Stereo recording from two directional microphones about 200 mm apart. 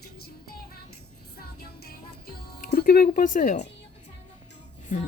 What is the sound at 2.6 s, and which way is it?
Speech, 45° left (ahead or behind).